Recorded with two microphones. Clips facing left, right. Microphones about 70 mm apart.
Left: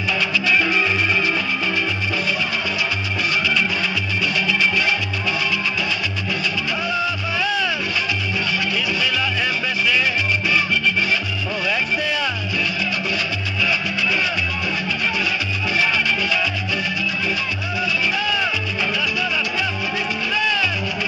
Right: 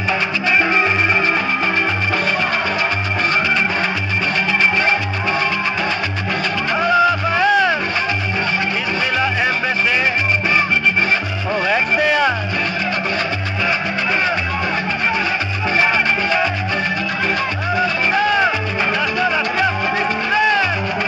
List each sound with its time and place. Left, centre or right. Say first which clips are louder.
0.5 s music: right 4 dB; right
6.8 s music: right 12 dB; right
9.2 s music: right 5 dB; right
11.6 s music: right 6 dB; right
15.8 s music: right 4 dB; right
17.7 s music: right 5 dB; right